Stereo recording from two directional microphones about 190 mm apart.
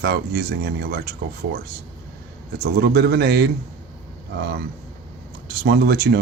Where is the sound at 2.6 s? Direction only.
55° right (ahead or behind).